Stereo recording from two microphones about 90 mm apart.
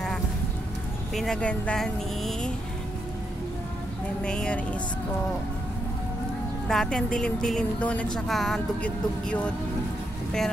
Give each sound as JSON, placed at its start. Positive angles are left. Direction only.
{"t": 1.1, "sound": "a woman's voice", "side_deg": 5}
{"t": 4.2, "sound": "a woman's voice", "side_deg": 10}
{"t": 6.7, "sound": "a woman's voice", "side_deg": 5}
{"t": 8.3, "sound": "speech", "side_deg": 0}
{"t": 8.8, "sound": "a woman's voice", "side_deg": 15}